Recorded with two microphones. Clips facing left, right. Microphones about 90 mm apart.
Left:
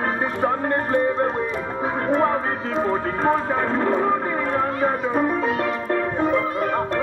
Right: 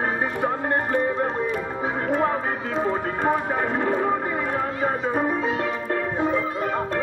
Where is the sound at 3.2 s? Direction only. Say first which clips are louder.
Left 2 dB; 15° right (ahead or behind).